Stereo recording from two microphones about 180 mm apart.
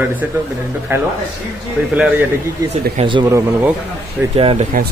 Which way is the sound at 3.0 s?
25° right (ahead or behind).